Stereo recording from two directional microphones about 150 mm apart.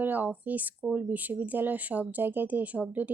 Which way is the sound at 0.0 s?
10° right (ahead or behind).